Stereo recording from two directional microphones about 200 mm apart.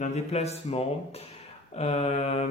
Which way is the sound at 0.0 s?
35° left (ahead or behind).